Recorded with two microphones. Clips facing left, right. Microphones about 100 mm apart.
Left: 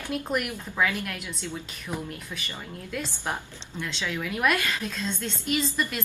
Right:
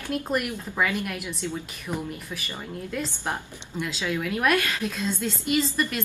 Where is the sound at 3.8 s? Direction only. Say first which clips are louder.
Right 3 dB; 10° right (ahead or behind).